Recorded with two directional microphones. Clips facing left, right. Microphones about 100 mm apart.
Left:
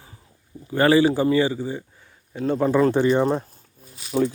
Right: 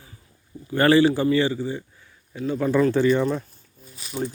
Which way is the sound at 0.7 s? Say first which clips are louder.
Even; 10° left (ahead or behind).